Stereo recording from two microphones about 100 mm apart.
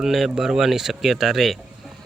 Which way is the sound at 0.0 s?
5° right (ahead or behind).